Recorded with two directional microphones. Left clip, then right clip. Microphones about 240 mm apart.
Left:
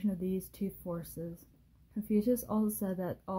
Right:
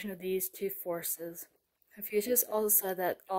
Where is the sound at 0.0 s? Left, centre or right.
Right.